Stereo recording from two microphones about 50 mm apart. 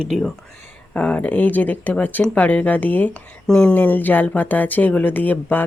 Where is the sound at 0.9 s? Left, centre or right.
Left.